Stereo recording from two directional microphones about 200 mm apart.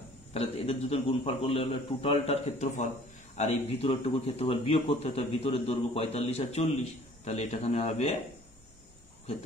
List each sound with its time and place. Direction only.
0.3 s a man's voice: 30° left (ahead or behind)